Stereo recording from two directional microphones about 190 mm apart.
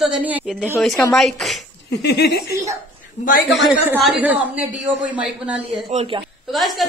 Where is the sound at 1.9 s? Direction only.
60° left (ahead or behind).